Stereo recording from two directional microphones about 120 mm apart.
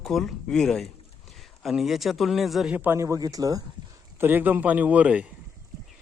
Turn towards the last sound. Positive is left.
turn(degrees=-10)  # may be behind; listen again after turning